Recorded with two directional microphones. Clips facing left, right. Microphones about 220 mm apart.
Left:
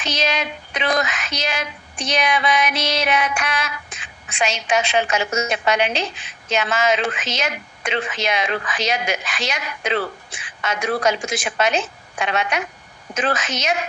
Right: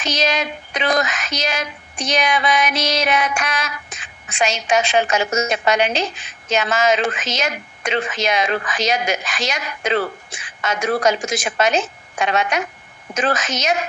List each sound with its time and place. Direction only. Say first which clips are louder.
0.0 s speech: right 2 dB; 45° right (ahead or behind)